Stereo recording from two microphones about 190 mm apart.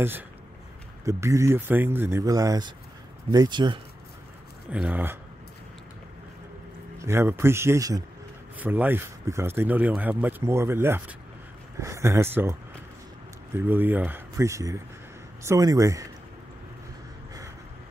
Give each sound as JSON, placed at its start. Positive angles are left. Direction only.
{"t": 1.0, "sound": "speech", "side_deg": -15}
{"t": 4.6, "sound": "speech", "side_deg": -5}
{"t": 7.0, "sound": "speech", "side_deg": -15}
{"t": 13.6, "sound": "speech", "side_deg": -10}